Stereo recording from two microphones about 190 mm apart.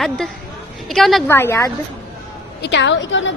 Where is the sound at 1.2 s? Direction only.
10° left (ahead or behind).